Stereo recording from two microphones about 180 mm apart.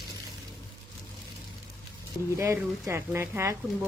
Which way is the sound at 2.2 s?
15° left (ahead or behind).